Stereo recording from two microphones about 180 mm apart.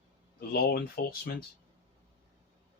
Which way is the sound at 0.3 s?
60° left (ahead or behind).